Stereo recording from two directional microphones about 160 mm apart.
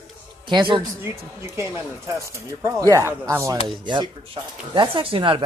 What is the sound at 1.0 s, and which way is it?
Speech, 15° right (ahead or behind).